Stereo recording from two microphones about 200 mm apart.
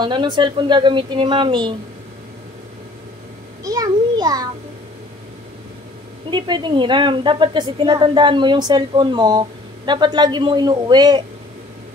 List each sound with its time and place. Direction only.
0.0 s a woman's voice: 20° right (ahead or behind)
3.6 s a sound: 20° right (ahead or behind)
6.3 s a woman's voice: 20° right (ahead or behind)